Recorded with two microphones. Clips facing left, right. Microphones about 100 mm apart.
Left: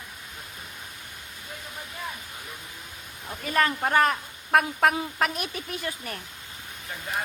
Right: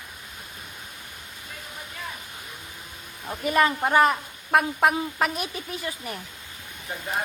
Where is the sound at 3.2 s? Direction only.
15° right (ahead or behind).